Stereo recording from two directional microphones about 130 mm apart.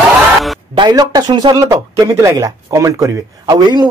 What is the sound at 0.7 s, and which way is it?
Speech, 30° right (ahead or behind).